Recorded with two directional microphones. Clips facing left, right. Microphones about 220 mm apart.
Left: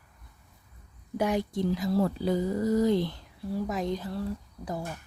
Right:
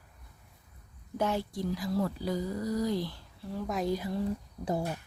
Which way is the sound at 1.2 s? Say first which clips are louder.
Left 4 dB; 15° left (ahead or behind).